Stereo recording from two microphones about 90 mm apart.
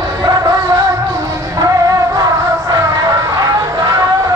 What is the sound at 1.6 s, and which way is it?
Music, 40° right (ahead or behind).